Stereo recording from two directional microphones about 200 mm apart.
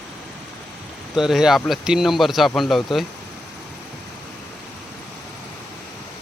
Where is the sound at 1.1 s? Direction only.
Centre (ahead or behind).